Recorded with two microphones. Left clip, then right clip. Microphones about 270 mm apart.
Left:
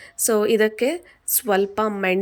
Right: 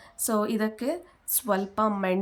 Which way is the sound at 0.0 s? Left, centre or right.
Centre.